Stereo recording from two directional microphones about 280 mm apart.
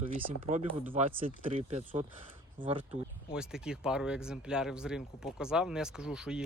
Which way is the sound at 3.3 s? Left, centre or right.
Centre.